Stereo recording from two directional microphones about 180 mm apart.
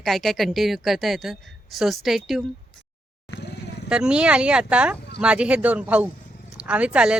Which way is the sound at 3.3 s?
70° left (ahead or behind).